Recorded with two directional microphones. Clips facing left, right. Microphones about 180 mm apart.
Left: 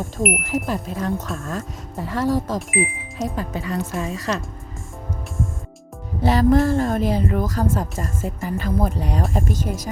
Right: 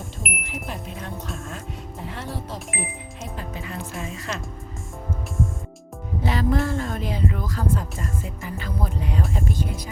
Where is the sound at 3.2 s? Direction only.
40° left (ahead or behind).